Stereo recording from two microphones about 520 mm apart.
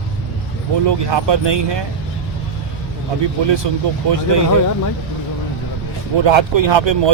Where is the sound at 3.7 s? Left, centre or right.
Right.